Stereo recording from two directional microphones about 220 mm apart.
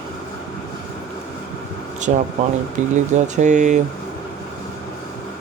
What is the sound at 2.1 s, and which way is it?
Speech, 35° right (ahead or behind).